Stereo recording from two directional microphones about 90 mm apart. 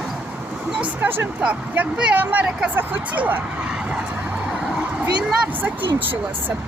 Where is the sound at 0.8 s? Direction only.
25° right (ahead or behind).